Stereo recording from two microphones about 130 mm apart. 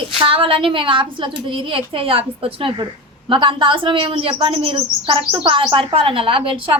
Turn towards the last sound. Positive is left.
turn(degrees=-45)  # may be behind; listen again after turning